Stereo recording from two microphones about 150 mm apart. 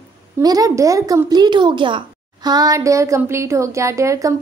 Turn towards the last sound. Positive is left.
turn(degrees=-20)  # may be behind; listen again after turning